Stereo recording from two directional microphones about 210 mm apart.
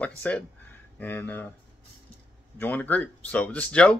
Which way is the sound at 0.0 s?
5° left (ahead or behind).